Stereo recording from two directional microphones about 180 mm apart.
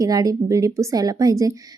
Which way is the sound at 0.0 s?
20° right (ahead or behind).